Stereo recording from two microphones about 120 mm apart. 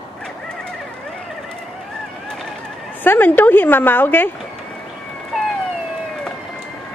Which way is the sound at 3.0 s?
15° left (ahead or behind).